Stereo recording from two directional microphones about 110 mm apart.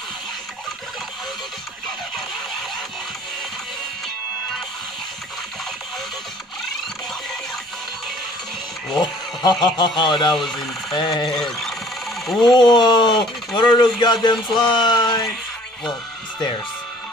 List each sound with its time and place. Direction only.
9.4 s speech: 40° left (ahead or behind)
10.3 s speech: centre (ahead or behind)
10.9 s speech: 40° left (ahead or behind)
11.3 s speech: 5° left (ahead or behind)
12.4 s speech: 40° left (ahead or behind)